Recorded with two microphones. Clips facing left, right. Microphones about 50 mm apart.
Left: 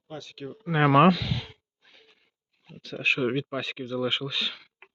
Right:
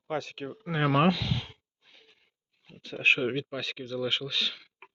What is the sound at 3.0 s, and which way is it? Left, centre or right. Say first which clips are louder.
Speech: right 2 dB; right.